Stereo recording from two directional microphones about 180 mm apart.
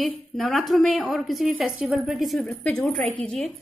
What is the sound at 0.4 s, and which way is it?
A woman's voice, centre (ahead or behind).